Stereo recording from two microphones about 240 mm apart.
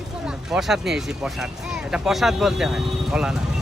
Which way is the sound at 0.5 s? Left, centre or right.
Centre.